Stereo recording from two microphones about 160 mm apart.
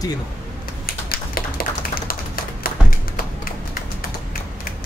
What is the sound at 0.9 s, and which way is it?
Tap, 65° left (ahead or behind).